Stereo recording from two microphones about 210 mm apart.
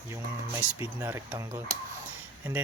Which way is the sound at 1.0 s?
10° right (ahead or behind).